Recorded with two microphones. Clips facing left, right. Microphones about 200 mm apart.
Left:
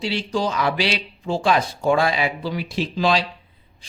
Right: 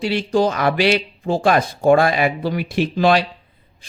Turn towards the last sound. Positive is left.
turn(degrees=-60)  # may be behind; listen again after turning